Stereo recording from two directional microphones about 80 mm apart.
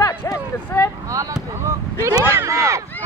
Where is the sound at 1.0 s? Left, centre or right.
Right.